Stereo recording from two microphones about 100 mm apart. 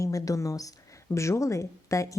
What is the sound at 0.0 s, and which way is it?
A woman's voice, 35° left (ahead or behind).